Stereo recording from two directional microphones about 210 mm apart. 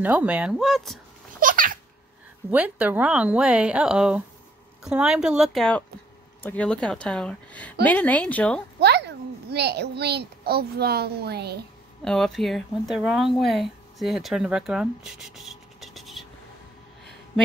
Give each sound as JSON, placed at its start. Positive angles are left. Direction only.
{"t": 0.0, "sound": "speech", "side_deg": -5}
{"t": 1.4, "sound": "a sound", "side_deg": -40}
{"t": 2.5, "sound": "speech", "side_deg": -5}
{"t": 8.7, "sound": "a child's voice", "side_deg": -50}
{"t": 12.0, "sound": "speech", "side_deg": 0}